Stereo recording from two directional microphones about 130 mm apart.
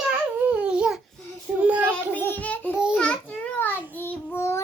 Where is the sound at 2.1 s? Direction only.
15° left (ahead or behind).